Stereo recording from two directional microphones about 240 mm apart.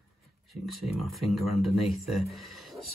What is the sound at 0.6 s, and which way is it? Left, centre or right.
Speech, centre.